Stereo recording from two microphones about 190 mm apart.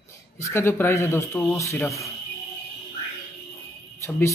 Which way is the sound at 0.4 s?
15° left (ahead or behind).